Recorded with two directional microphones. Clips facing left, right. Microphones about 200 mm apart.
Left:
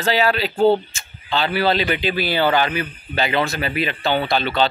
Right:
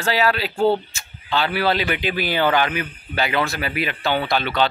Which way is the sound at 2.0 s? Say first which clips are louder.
Left 2 dB; 15° right (ahead or behind).